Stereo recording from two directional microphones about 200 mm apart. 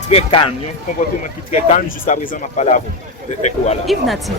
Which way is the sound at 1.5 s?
35° left (ahead or behind).